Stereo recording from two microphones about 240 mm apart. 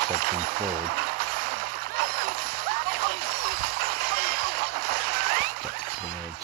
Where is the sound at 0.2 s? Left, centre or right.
Right.